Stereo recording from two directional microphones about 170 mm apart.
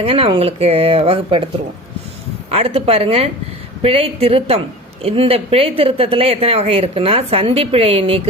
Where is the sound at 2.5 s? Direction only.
35° right (ahead or behind).